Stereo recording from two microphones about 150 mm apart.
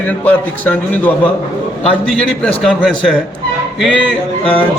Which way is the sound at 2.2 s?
Centre (ahead or behind).